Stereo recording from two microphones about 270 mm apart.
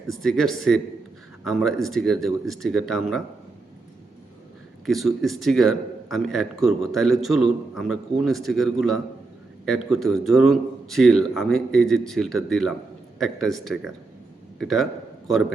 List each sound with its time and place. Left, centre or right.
0.1 s a man's voice: centre
4.9 s a man's voice: centre